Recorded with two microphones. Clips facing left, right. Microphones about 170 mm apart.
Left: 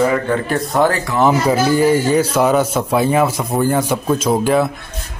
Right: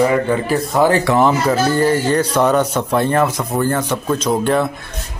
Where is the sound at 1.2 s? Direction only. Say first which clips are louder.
Left 1 dB; 5° left (ahead or behind).